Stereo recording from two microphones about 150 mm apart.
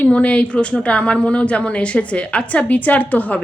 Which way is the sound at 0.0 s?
10° left (ahead or behind).